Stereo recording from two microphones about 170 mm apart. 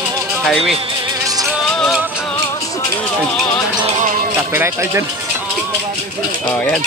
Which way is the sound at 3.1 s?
5° left (ahead or behind).